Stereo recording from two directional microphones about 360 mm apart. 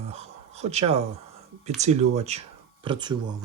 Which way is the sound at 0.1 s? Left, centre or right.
Centre.